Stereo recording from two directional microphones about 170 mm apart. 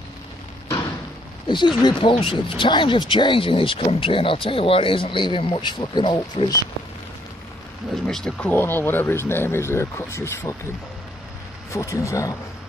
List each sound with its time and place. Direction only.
1.5 s speech: 25° left (ahead or behind)
7.9 s speech: centre (ahead or behind)
11.7 s speech: 15° left (ahead or behind)